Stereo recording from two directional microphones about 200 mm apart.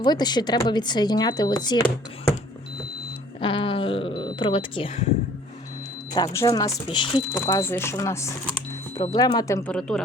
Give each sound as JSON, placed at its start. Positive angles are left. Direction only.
{"t": 0.0, "sound": "speech", "side_deg": 20}
{"t": 3.4, "sound": "speech", "side_deg": 25}
{"t": 6.1, "sound": "speech", "side_deg": 15}
{"t": 9.7, "sound": "a woman's voice", "side_deg": 5}